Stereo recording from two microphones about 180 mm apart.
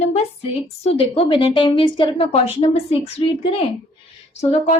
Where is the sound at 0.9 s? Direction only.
30° left (ahead or behind).